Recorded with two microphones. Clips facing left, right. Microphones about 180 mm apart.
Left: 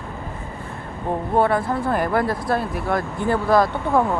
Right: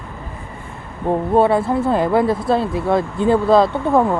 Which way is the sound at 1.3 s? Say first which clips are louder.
Right 4 dB; 25° right (ahead or behind).